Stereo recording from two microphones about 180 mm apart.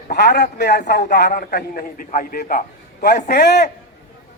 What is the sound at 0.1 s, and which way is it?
A man's voice, 60° left (ahead or behind).